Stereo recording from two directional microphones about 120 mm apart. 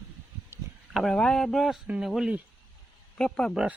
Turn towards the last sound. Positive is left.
turn(degrees=5)  # may be behind; listen again after turning